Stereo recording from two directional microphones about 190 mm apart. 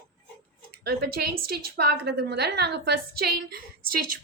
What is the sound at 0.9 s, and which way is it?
A woman's voice, 55° right (ahead or behind).